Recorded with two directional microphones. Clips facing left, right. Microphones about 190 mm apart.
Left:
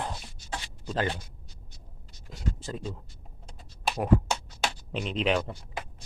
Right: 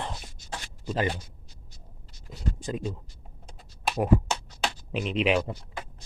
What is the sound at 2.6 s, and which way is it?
Speech, 15° right (ahead or behind).